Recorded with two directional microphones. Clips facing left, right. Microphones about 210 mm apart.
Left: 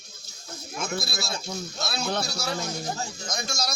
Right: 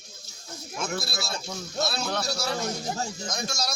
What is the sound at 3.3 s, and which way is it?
Speech, 5° right (ahead or behind).